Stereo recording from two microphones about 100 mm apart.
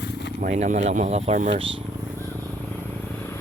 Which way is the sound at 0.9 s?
85° right.